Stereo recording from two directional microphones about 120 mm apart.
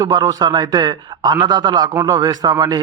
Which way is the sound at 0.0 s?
35° right (ahead or behind).